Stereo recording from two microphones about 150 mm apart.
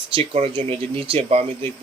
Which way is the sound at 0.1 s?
40° right (ahead or behind).